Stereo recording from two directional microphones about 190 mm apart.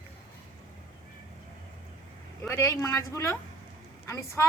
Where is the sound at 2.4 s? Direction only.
15° left (ahead or behind).